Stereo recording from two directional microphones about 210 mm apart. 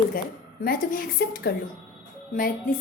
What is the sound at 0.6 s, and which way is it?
A woman's voice, 45° left (ahead or behind).